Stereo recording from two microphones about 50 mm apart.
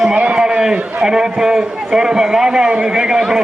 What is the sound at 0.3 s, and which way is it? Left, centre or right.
A man's voice, centre.